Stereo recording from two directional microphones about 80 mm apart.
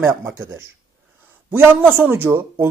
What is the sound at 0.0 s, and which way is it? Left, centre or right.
Speech, right.